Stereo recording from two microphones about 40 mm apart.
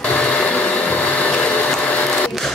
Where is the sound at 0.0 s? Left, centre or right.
Left.